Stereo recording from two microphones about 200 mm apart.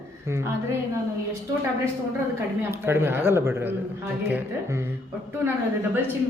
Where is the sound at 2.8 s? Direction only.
10° right (ahead or behind).